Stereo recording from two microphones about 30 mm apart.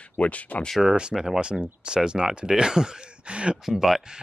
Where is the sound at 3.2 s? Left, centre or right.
Right.